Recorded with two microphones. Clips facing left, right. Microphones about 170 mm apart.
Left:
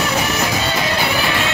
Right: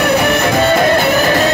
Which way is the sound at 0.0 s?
60° right (ahead or behind).